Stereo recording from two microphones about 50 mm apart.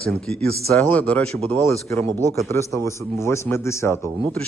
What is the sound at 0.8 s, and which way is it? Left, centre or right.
Speech, left.